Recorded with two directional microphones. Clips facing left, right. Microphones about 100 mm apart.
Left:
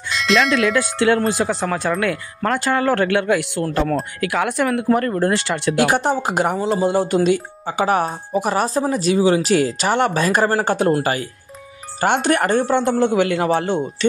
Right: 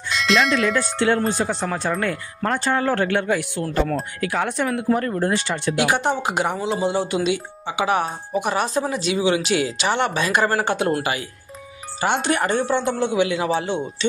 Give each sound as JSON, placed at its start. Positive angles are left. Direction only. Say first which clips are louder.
{"t": 0.1, "sound": "bell", "louder": "left 2 dB", "side_deg": 0}
{"t": 1.4, "sound": "speech", "louder": "left 3 dB", "side_deg": 80}
{"t": 5.8, "sound": "speech", "louder": "left 3 dB", "side_deg": 45}
{"t": 12.0, "sound": "speech", "louder": "left 4 dB", "side_deg": 50}